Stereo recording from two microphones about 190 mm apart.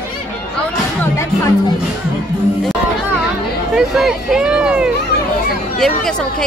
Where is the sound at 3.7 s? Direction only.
5° right (ahead or behind).